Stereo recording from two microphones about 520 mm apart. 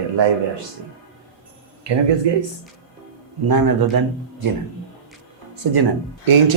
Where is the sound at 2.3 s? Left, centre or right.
Right.